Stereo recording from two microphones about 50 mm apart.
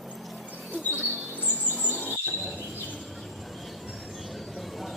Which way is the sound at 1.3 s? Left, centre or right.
Right.